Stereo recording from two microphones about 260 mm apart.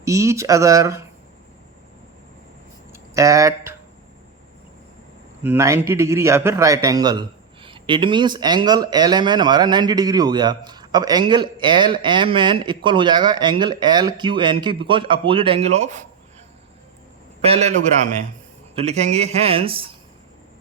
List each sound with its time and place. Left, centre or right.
0.0 s a man's voice: centre
2.9 s a sound: centre
5.4 s a man's voice: centre; by 16.0 s right
17.4 s speech: right